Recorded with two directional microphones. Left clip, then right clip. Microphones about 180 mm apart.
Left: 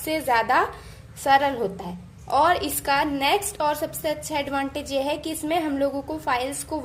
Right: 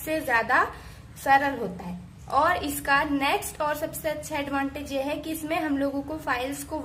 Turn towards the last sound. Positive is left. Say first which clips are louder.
# left 3 dB
turn(degrees=15)  # may be behind; listen again after turning